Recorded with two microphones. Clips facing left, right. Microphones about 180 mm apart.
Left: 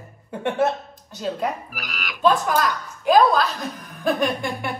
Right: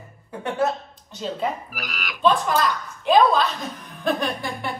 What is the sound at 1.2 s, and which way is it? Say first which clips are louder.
A woman's voice: left 1 dB; centre (ahead or behind).